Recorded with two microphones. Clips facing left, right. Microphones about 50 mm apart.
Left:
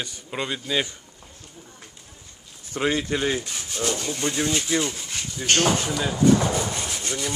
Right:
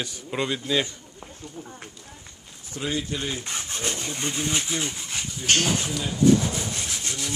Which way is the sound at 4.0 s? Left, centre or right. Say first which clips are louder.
Left 4 dB; right.